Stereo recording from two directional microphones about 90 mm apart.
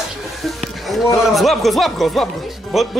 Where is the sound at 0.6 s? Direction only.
Centre (ahead or behind).